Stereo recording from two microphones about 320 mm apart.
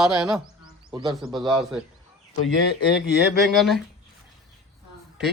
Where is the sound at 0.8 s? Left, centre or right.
Centre.